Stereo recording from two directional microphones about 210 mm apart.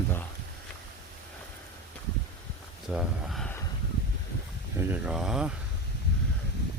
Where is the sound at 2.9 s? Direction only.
Centre (ahead or behind).